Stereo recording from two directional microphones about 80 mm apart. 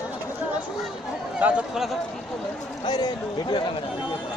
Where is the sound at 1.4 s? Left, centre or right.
Centre.